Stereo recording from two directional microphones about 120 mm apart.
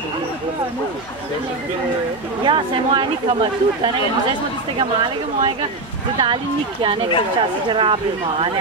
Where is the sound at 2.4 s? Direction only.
45° right (ahead or behind).